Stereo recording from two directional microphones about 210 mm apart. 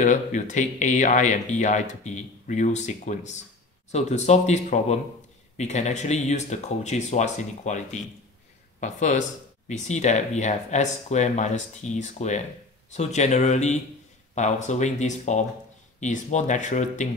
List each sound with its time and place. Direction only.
0.0 s speech: 35° left (ahead or behind)